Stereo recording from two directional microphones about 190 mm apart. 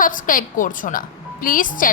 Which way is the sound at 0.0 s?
45° left (ahead or behind).